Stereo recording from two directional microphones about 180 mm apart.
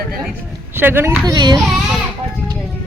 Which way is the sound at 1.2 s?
25° right (ahead or behind).